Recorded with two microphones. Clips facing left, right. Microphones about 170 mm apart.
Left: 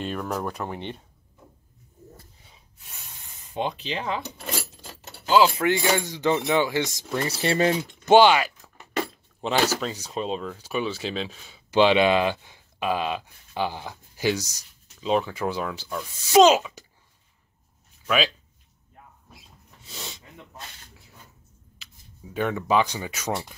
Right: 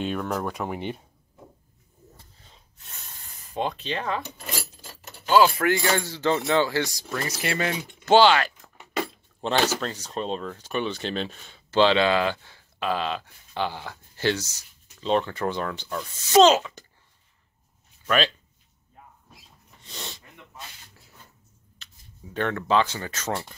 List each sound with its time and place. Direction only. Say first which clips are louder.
0.0 s speech: right 1 dB; centre (ahead or behind)
0.7 s speech: right 3 dB; 10° right (ahead or behind)
2.4 s rub: even; 10° left (ahead or behind)
3.5 s speech: even; 20° left (ahead or behind)
7.2 s speech: left 6 dB; 30° left (ahead or behind)
8.0 s speech: left 1 dB; 15° left (ahead or behind)
8.5 s speech: right 1 dB; centre (ahead or behind)
11.7 s speech: left 1 dB; 15° left (ahead or behind)
18.0 s speech: even; 5° left (ahead or behind)
19.8 s snort: even; 5° left (ahead or behind)
22.3 s speech: even; 10° left (ahead or behind)